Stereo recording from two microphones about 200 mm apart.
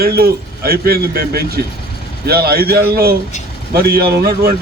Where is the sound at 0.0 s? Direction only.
50° right (ahead or behind).